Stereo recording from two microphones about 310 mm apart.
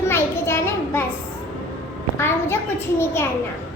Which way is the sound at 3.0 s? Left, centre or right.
Centre.